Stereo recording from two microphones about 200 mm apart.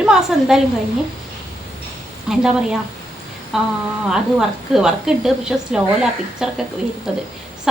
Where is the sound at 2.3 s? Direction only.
5° right (ahead or behind).